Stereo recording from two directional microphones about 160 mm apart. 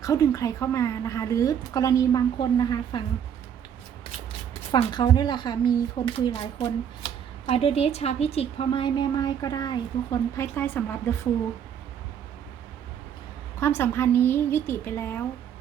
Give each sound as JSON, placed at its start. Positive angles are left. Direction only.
{"t": 0.0, "sound": "a woman's voice", "side_deg": 20}
{"t": 4.7, "sound": "a woman's voice", "side_deg": 25}
{"t": 13.6, "sound": "a woman's voice", "side_deg": 15}